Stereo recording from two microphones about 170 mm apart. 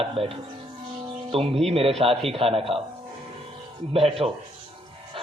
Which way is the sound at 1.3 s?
35° right (ahead or behind).